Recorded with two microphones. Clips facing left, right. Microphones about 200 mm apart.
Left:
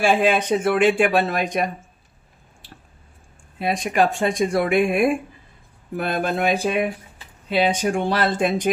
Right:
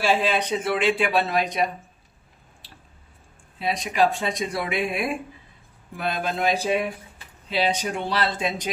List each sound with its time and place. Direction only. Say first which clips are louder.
0.0 s speech: left 4 dB; 50° left (ahead or behind)
3.5 s speech: left 4 dB; 50° left (ahead or behind)